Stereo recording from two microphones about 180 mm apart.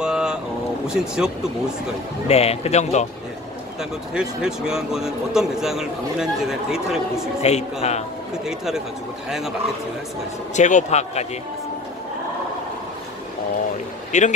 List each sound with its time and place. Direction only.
0.0 s boat: 5° right (ahead or behind)
0.8 s speech: 5° right (ahead or behind)
2.2 s speech: 35° left (ahead or behind)
4.1 s speech: 5° right (ahead or behind)
7.4 s speech: 35° left (ahead or behind)
8.5 s speech: 5° right (ahead or behind)
10.5 s speech: 40° left (ahead or behind)
14.1 s speech: 40° left (ahead or behind)